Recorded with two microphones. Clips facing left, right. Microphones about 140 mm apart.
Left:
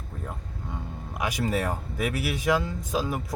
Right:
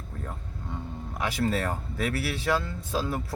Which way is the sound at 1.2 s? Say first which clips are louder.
Even; 15° left (ahead or behind).